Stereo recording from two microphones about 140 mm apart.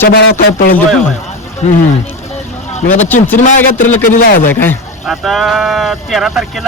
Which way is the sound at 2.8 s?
55° left (ahead or behind).